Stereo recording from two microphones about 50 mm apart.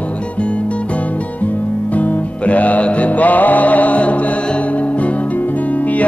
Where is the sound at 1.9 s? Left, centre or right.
Left.